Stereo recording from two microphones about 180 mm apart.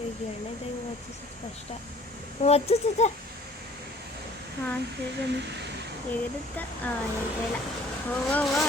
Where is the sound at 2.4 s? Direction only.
35° left (ahead or behind).